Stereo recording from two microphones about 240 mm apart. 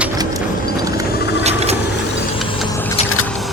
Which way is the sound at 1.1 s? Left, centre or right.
Left.